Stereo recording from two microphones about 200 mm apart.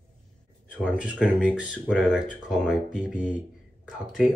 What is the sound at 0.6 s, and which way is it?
Speech, 5° right (ahead or behind).